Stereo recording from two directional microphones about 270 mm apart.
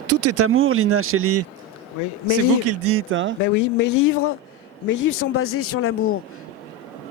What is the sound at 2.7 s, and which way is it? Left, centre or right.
Speech, right.